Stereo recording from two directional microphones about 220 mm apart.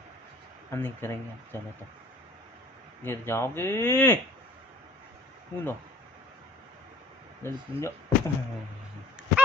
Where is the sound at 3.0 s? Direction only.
10° left (ahead or behind).